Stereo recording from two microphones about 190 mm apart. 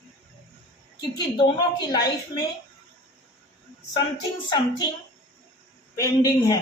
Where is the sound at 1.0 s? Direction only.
20° left (ahead or behind).